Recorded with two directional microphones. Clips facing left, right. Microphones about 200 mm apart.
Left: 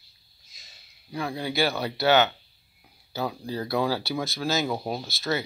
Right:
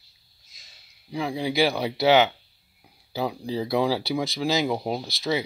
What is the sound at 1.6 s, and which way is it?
Speech, 15° right (ahead or behind).